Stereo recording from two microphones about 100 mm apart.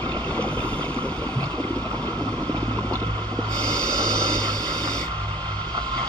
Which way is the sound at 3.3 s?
10° left (ahead or behind).